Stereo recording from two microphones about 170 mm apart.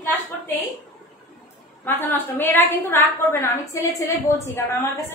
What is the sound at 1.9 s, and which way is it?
A woman's voice, 10° left (ahead or behind).